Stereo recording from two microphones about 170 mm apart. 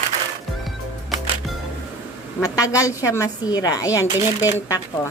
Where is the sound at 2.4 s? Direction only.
20° left (ahead or behind).